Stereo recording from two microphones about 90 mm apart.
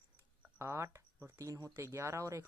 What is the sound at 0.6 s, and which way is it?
Speech, 35° right (ahead or behind).